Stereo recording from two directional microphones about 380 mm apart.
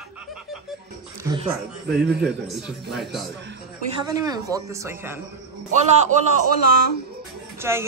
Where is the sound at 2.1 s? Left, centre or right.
Centre.